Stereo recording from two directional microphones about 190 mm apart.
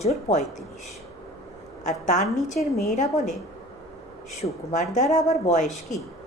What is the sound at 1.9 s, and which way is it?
Speech, 40° left (ahead or behind).